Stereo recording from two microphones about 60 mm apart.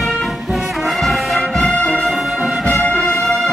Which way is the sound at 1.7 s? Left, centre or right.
Left.